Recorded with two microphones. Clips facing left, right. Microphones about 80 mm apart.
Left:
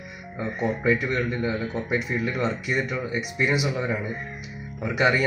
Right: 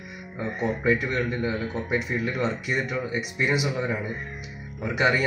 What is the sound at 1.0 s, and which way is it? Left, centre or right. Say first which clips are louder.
Speech: left 1 dB; right.